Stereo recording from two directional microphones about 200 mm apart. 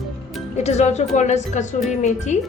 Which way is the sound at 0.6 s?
35° left (ahead or behind).